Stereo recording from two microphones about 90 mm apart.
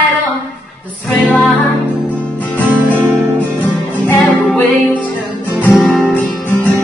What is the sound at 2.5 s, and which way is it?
Music, 15° left (ahead or behind).